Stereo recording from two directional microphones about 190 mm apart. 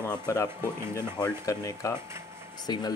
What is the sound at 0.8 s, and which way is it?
Speech, 15° right (ahead or behind).